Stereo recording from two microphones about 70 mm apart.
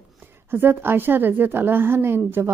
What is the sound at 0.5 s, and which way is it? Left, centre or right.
A woman's voice, right.